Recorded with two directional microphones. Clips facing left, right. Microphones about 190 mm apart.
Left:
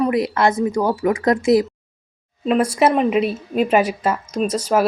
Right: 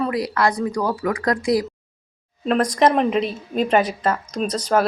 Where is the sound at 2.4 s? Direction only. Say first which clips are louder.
Left 1 dB; 5° left (ahead or behind).